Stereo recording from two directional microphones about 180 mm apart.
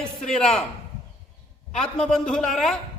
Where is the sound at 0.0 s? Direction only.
5° left (ahead or behind).